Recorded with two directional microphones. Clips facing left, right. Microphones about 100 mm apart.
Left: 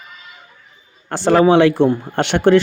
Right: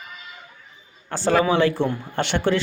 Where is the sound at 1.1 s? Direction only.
70° left (ahead or behind).